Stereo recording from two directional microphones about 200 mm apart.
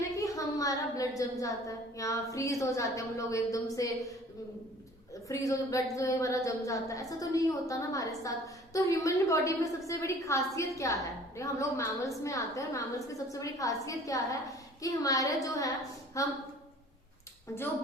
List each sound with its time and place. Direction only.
0.2 s a woman's voice: 15° left (ahead or behind)
5.3 s a woman's voice: 15° left (ahead or behind)